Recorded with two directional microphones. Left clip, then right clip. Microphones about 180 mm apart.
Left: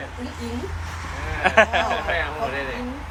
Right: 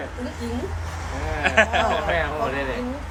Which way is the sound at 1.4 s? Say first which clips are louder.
Left 2 dB; 10° right (ahead or behind).